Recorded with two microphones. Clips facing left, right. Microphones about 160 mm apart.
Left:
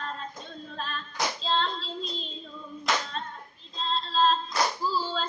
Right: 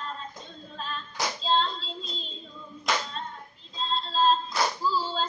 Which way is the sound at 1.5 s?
70° left (ahead or behind).